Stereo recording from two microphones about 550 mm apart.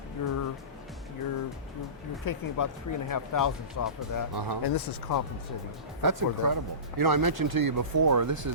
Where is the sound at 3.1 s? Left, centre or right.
Left.